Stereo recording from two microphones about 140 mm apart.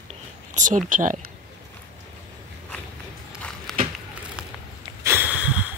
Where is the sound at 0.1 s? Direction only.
65° right (ahead or behind).